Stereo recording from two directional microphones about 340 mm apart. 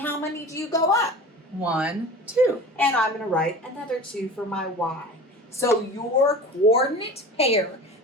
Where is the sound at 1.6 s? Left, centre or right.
Centre.